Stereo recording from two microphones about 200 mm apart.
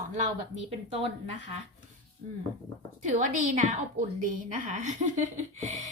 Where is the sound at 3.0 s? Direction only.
40° right (ahead or behind).